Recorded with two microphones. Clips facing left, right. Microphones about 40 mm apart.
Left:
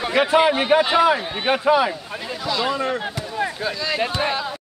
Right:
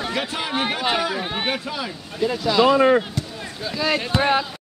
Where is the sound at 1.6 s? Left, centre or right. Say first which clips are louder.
Left 12 dB; left.